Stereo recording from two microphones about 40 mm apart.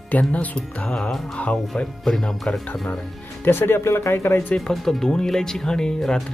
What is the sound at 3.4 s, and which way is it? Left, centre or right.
Speech, left.